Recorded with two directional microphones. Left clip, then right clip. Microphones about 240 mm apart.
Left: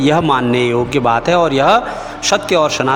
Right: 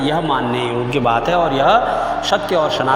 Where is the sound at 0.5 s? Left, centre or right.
Left.